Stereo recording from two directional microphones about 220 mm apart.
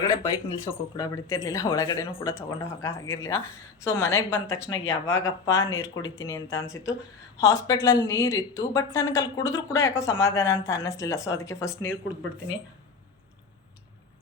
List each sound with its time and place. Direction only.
0.0 s speech: 15° left (ahead or behind)